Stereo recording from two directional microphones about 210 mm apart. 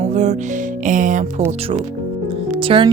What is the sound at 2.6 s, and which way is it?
Speech, 25° right (ahead or behind).